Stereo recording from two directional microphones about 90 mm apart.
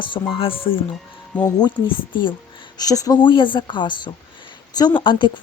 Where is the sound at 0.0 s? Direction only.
70° left (ahead or behind); by 0.8 s 85° left.